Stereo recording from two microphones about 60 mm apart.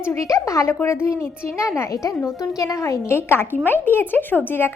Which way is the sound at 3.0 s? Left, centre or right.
Left.